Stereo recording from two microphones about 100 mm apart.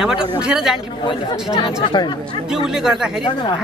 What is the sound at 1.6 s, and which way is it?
Speech, 50° left (ahead or behind).